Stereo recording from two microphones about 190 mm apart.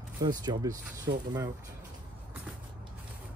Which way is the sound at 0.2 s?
20° right (ahead or behind).